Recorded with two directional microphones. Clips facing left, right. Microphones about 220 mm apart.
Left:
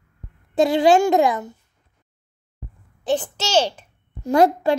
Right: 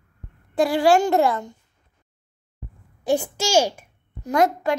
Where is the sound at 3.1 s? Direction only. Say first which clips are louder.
Right 1 dB; 10° right (ahead or behind).